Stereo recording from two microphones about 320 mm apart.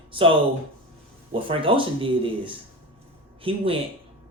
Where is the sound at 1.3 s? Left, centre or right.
Centre.